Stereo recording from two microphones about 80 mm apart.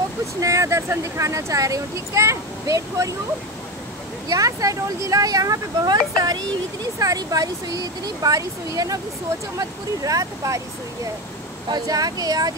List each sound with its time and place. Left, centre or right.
0.4 s speech: right
4.3 s speech: right
11.7 s speech: right